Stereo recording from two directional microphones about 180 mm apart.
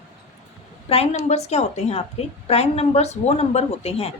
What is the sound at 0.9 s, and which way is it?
A woman's voice, 35° left (ahead or behind).